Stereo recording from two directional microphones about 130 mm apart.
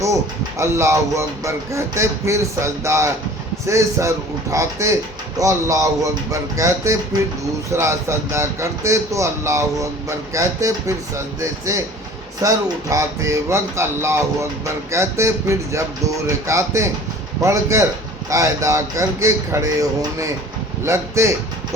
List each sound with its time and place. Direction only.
0.6 s speech: 20° right (ahead or behind)